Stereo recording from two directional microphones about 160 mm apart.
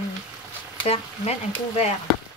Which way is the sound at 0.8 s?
40° left (ahead or behind).